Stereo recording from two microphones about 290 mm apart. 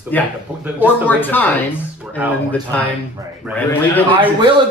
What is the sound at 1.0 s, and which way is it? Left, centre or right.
Speech, centre.